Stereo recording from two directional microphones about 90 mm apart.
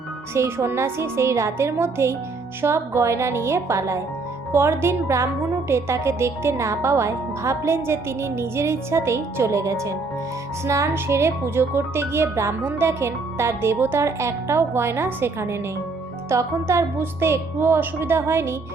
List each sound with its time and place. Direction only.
0.3 s a woman's voice: 30° right (ahead or behind)